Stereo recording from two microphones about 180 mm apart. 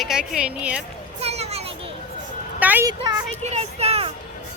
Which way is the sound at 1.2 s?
35° right (ahead or behind).